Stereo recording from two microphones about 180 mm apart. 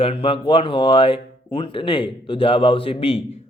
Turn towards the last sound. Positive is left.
turn(degrees=30)  # may be behind; listen again after turning